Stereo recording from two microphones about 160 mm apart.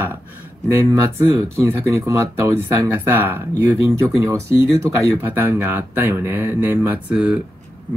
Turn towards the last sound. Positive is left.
turn(degrees=-5)  # may be behind; listen again after turning